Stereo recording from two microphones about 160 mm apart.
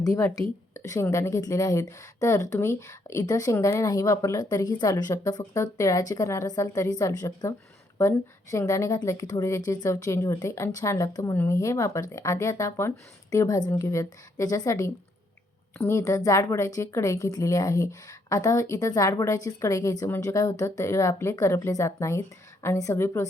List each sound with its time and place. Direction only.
0.0 s a woman's voice: 20° left (ahead or behind)